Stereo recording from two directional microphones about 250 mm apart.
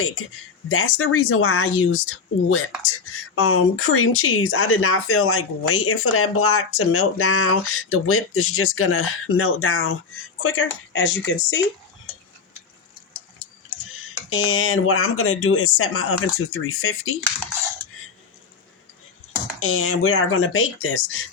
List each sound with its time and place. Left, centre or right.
0.7 s speech: left
14.3 s speech: left
19.5 s speech: left